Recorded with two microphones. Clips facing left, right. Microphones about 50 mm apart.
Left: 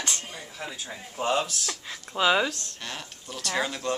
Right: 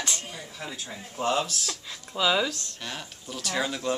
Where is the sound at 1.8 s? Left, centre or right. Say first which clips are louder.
Left 2 dB; left.